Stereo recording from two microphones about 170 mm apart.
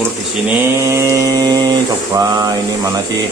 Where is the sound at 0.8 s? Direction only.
15° right (ahead or behind).